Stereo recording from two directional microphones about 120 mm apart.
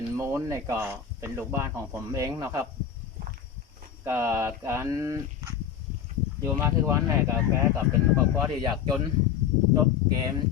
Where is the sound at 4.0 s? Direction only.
20° right (ahead or behind).